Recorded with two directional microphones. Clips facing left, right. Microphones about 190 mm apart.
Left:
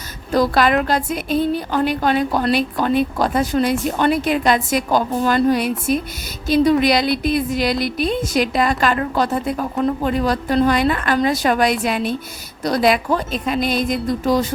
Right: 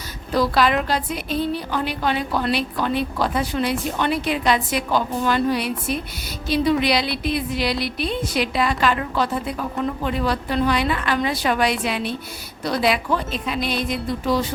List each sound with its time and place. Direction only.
0.3 s a woman's voice: 50° left (ahead or behind)